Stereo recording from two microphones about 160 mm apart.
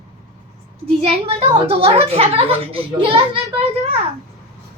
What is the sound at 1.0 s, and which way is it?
A woman's voice, 35° right (ahead or behind).